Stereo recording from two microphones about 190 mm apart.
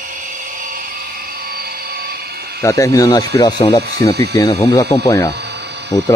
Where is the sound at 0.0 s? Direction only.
45° right (ahead or behind).